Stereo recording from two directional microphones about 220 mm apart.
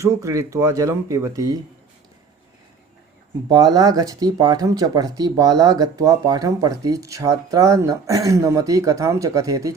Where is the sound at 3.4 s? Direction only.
15° right (ahead or behind).